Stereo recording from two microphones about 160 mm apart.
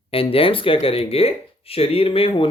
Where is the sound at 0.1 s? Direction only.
35° left (ahead or behind).